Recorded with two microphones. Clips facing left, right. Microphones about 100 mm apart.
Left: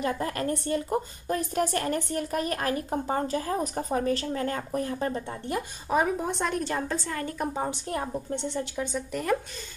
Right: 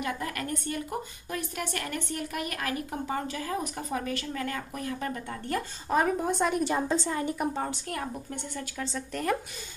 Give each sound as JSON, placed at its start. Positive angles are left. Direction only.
{"t": 0.0, "sound": "speech", "side_deg": 35}
{"t": 5.5, "sound": "a woman's voice", "side_deg": 20}
{"t": 5.9, "sound": "speech", "side_deg": 5}
{"t": 6.6, "sound": "a woman's voice", "side_deg": -15}
{"t": 7.9, "sound": "a woman's voice", "side_deg": 25}
{"t": 9.1, "sound": "speech", "side_deg": 0}